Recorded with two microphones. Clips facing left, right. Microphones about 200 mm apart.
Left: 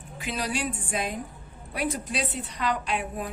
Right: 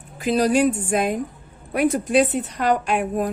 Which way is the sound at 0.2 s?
40° right (ahead or behind).